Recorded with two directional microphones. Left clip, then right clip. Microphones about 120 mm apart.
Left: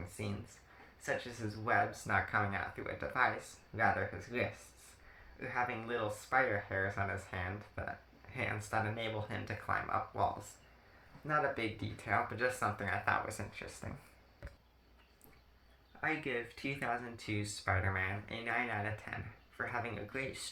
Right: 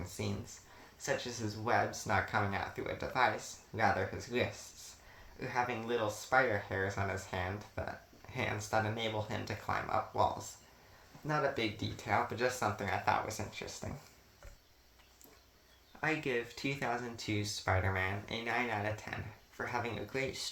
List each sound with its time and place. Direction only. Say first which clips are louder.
0.2 s speech: right 3 dB; 40° right (ahead or behind)
11.3 s speech: right 1 dB; 30° right (ahead or behind)
16.0 s speech: right 2 dB; 45° right (ahead or behind)